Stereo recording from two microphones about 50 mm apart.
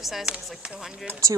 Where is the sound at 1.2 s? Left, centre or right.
Right.